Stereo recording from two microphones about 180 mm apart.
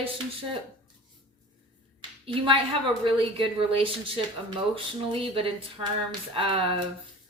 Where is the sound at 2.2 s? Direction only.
30° right (ahead or behind).